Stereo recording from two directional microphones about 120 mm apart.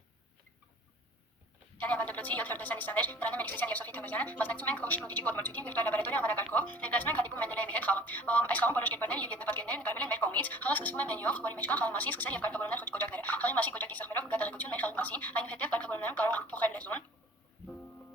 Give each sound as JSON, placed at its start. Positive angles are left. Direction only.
{"t": 1.8, "sound": "a woman's voice", "side_deg": 10}